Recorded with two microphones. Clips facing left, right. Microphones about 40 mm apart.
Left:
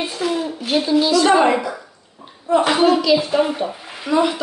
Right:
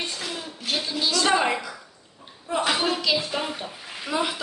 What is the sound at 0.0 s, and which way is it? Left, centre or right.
A woman's voice, centre.